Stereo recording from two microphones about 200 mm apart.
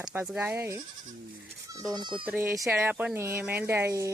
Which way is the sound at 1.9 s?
20° right (ahead or behind).